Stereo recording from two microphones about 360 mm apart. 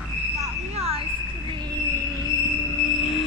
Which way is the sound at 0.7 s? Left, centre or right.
Centre.